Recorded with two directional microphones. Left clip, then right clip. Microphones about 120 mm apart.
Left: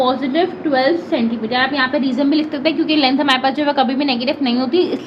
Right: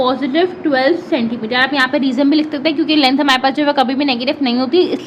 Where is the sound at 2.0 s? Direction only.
80° right.